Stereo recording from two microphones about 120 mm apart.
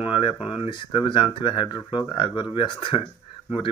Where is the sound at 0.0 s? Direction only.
45° left (ahead or behind).